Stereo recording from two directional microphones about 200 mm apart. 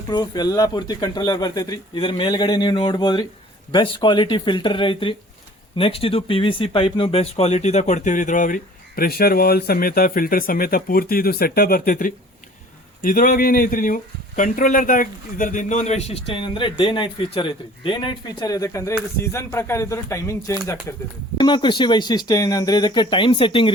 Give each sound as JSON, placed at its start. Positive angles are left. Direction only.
{"t": 0.1, "sound": "speech", "side_deg": 20}
{"t": 21.3, "sound": "speech", "side_deg": 25}